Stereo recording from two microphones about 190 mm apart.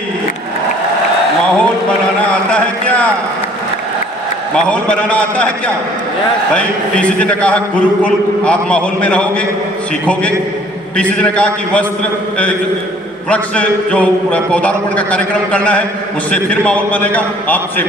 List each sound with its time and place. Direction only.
1.5 s a sound: 5° left (ahead or behind)
4.5 s a man's voice: 5° left (ahead or behind)
10.9 s a man's voice: 5° left (ahead or behind)
13.3 s a man's voice: 5° left (ahead or behind)